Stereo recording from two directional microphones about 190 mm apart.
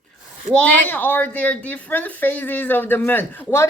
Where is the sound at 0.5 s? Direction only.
10° left (ahead or behind).